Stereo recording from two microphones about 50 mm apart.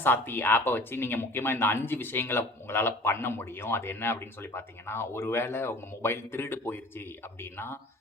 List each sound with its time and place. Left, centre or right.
0.0 s speech: left